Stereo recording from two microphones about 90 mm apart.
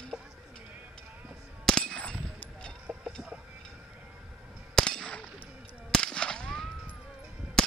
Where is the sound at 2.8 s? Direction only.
15° right (ahead or behind).